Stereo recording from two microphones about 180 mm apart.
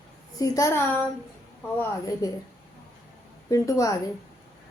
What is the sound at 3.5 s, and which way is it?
Speech, 20° left (ahead or behind).